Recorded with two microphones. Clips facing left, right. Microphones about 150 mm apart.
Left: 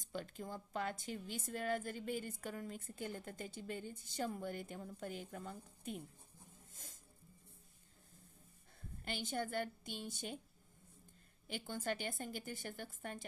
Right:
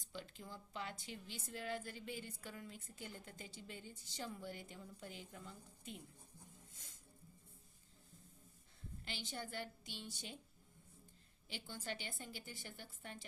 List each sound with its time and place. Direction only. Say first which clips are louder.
0.1 s a woman's voice: left 6 dB; 50° left (ahead or behind)
6.7 s music: left 5 dB; 45° left (ahead or behind)
9.0 s a woman's voice: left 7 dB; 50° left (ahead or behind)
11.4 s a woman's voice: left 7 dB; 50° left (ahead or behind)